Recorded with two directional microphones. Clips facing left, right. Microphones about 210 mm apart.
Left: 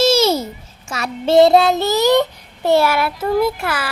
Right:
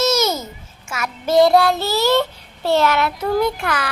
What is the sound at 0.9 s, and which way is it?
Child singing, 35° left (ahead or behind).